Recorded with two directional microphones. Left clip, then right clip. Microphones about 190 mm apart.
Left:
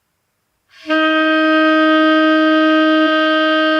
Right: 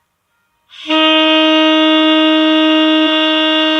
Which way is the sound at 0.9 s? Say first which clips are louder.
Right 4 dB; 35° right (ahead or behind).